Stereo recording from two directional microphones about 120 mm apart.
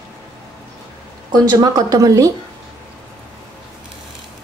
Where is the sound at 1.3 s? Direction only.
30° right (ahead or behind).